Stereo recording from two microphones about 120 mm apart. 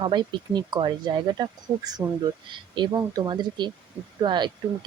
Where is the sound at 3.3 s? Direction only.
40° right (ahead or behind).